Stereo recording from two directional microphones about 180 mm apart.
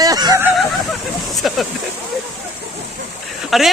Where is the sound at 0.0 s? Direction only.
20° right (ahead or behind).